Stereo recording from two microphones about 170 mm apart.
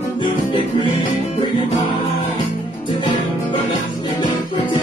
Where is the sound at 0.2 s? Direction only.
30° left (ahead or behind).